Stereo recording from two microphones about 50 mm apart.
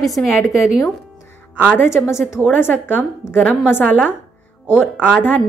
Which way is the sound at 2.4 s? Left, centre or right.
Left.